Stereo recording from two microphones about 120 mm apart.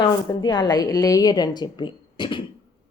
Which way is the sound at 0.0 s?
35° left (ahead or behind).